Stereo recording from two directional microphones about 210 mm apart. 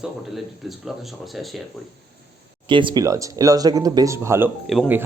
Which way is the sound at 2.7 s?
25° right (ahead or behind).